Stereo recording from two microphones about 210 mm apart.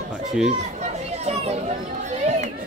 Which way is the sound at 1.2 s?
30° right (ahead or behind).